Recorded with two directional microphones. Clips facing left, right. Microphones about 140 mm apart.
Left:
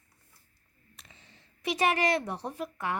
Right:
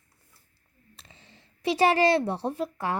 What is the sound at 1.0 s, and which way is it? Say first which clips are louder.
A woman's voice: right 2 dB; 30° right (ahead or behind).